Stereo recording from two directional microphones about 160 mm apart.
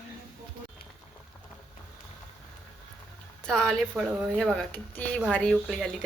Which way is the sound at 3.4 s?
5° left (ahead or behind).